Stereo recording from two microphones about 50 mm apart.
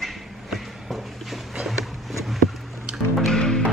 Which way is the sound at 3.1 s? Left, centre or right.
Centre.